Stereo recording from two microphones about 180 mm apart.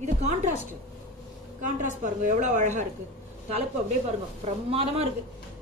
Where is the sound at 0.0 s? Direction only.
40° right (ahead or behind).